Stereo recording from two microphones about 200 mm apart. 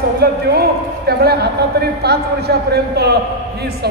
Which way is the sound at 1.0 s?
50° right (ahead or behind).